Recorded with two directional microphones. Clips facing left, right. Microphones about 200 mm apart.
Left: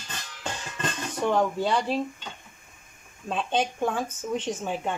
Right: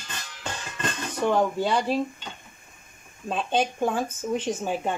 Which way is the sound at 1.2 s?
5° right (ahead or behind).